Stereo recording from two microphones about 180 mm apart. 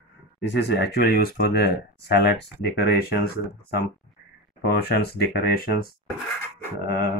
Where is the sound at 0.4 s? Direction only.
70° left (ahead or behind).